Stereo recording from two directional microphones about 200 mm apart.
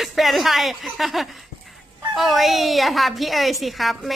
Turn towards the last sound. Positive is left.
turn(degrees=0)  # may be behind; listen again after turning